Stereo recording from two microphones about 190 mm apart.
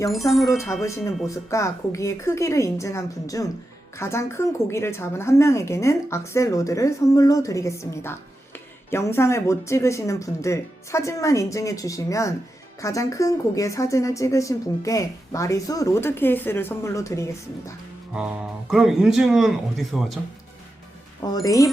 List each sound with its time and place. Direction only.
0.3 s speech: centre (ahead or behind)
0.8 s a woman's voice: 15° left (ahead or behind)
18.7 s speech: centre (ahead or behind)
21.4 s a woman's voice: 20° left (ahead or behind)